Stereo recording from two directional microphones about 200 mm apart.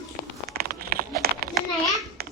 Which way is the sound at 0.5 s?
50° right (ahead or behind).